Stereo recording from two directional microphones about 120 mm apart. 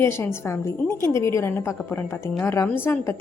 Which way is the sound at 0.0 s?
20° left (ahead or behind).